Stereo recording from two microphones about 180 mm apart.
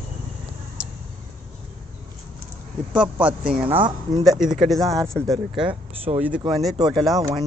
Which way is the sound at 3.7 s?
30° right (ahead or behind).